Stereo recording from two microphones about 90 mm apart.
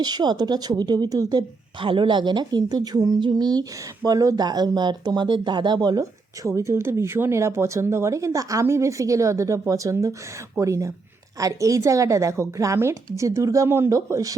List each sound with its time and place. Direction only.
0.0 s speech: 50° right (ahead or behind)
1.8 s speech: 70° right (ahead or behind); by 3.2 s 40° right (ahead or behind)
3.2 s speech: 55° right (ahead or behind)